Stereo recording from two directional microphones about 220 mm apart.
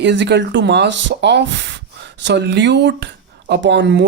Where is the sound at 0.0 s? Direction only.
50° right (ahead or behind).